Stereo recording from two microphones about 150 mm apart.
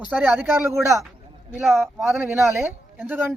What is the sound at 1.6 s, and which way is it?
Speech, centre (ahead or behind).